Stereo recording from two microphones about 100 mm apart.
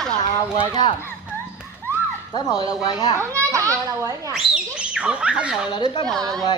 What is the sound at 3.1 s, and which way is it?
Children playing, 30° right (ahead or behind).